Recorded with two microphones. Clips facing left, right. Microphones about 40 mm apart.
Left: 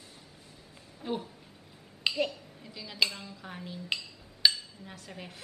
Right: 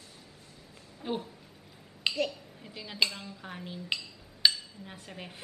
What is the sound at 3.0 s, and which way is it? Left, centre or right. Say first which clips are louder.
Speech: even; centre.